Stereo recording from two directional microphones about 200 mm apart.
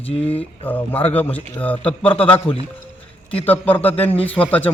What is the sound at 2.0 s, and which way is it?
Speech, 30° left (ahead or behind).